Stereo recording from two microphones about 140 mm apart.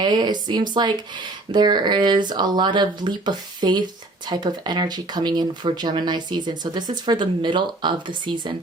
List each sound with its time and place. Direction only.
0.0 s speech: 30° right (ahead or behind)